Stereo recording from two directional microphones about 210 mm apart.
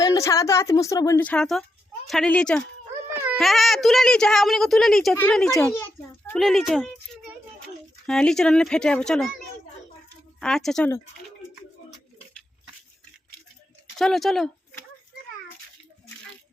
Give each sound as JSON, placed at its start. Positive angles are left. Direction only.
{"t": 0.0, "sound": "a woman's voice", "side_deg": 15}
{"t": 3.1, "sound": "baby cry", "side_deg": -10}
{"t": 3.3, "sound": "a woman's voice", "side_deg": 0}
{"t": 5.5, "sound": "a sound", "side_deg": 10}
{"t": 6.4, "sound": "a child's voice", "side_deg": 0}
{"t": 10.4, "sound": "a woman's voice", "side_deg": 0}
{"t": 14.0, "sound": "a woman's voice", "side_deg": 0}